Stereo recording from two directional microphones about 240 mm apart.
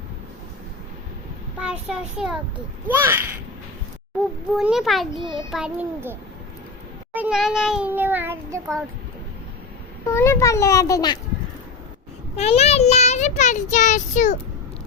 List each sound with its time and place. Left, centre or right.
1.5 s a child's voice: centre
4.5 s a child's voice: centre
10.1 s a child's voice: centre
12.4 s a child's voice: left